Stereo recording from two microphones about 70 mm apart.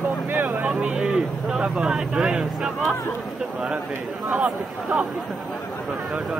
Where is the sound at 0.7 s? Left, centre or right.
Centre.